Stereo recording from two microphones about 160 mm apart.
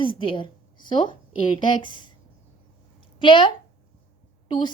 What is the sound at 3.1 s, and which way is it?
Speech, 30° left (ahead or behind).